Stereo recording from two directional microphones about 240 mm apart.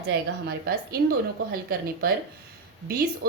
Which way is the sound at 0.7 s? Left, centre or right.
Right.